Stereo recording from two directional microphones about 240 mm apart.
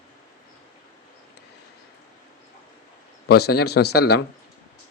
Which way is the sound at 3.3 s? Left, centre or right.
Left.